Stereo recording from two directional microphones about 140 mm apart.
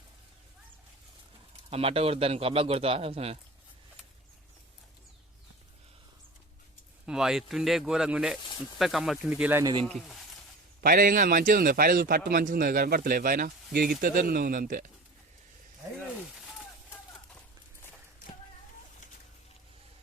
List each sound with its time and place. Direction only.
1.7 s a man's voice: 45° right (ahead or behind)
7.0 s speech: 5° right (ahead or behind)
9.8 s speech: 5° left (ahead or behind)
10.8 s a man's voice: 90° right